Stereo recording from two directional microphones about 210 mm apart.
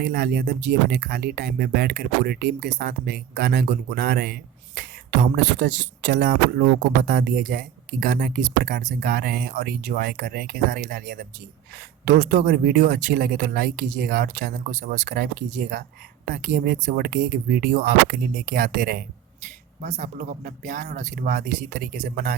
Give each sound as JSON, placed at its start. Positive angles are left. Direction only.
{"t": 0.0, "sound": "speech", "side_deg": -50}
{"t": 19.8, "sound": "speech", "side_deg": -35}